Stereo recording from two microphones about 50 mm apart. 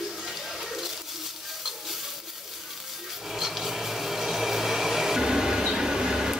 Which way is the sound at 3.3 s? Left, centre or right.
Centre.